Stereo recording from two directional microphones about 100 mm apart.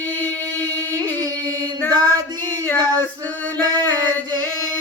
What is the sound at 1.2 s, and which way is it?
Music, 40° right (ahead or behind).